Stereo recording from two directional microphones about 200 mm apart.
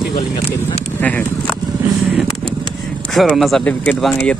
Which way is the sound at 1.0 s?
10° left (ahead or behind).